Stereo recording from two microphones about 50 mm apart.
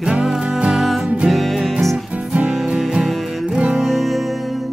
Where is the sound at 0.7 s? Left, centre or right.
Centre.